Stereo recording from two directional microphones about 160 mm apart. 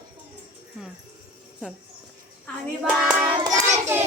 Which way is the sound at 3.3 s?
25° right (ahead or behind).